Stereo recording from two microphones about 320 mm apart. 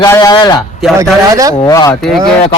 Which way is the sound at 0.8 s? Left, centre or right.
Centre.